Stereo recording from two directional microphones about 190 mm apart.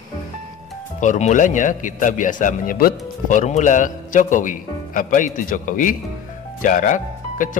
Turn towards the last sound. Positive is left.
turn(degrees=45)  # may be behind; listen again after turning